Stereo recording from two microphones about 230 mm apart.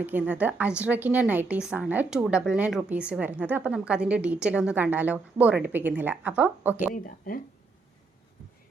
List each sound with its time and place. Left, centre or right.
0.0 s a woman's voice: centre
6.9 s speech: left